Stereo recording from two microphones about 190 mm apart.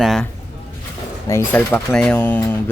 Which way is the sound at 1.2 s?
10° left (ahead or behind).